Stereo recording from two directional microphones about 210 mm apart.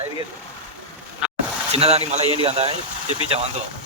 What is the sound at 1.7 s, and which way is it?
Speech, 30° right (ahead or behind).